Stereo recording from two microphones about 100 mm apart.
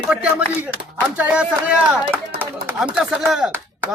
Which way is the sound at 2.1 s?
20° right (ahead or behind).